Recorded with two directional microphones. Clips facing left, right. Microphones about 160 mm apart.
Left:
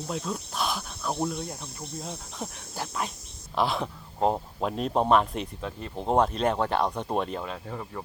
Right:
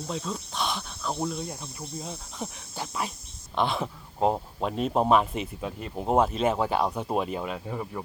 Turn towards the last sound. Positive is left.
turn(degrees=-10)  # may be behind; listen again after turning